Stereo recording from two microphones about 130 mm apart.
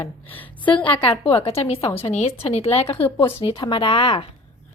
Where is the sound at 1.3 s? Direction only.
45° left (ahead or behind).